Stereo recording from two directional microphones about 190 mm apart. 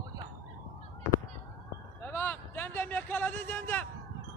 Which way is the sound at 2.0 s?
10° left (ahead or behind).